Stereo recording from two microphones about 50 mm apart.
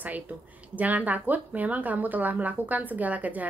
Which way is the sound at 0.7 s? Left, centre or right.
Right.